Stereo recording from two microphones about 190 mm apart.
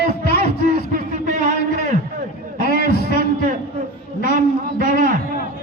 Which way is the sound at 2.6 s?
55° left (ahead or behind).